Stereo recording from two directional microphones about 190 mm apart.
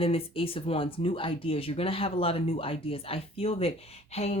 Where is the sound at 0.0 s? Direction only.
30° left (ahead or behind).